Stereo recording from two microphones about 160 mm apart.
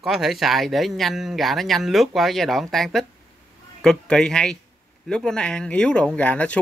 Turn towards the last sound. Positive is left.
turn(degrees=10)  # may be behind; listen again after turning